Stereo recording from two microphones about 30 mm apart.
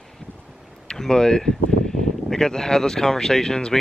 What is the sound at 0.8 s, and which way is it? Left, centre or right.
Speech, left.